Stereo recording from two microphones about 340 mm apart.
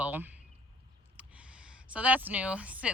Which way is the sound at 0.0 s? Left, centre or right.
Centre.